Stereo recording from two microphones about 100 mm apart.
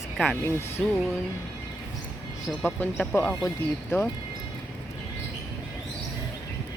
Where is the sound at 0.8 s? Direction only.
10° left (ahead or behind).